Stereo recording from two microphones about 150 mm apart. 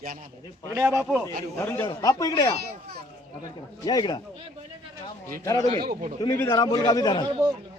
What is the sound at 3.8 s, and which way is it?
Speech, 25° left (ahead or behind).